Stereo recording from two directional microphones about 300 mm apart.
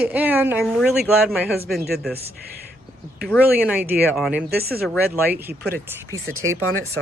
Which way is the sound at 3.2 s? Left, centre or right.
Centre.